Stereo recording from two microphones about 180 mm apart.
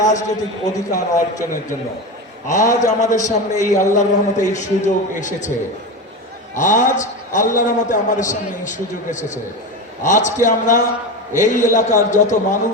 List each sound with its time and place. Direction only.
0.0 s a man's voice: 40° left (ahead or behind)
0.7 s a man's voice: 20° left (ahead or behind)
2.6 s a man's voice: 20° left (ahead or behind)
3.0 s a man's voice: 45° left (ahead or behind)
6.6 s a man's voice: 45° left (ahead or behind)